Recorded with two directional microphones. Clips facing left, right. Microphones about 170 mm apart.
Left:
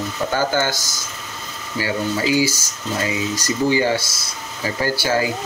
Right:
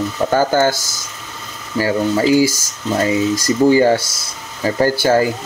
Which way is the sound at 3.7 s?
45° right (ahead or behind).